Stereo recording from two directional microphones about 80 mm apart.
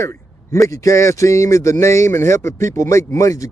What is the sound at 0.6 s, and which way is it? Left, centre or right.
Speech, left.